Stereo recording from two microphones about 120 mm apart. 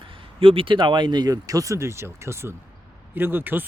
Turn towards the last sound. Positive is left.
turn(degrees=-15)  # may be behind; listen again after turning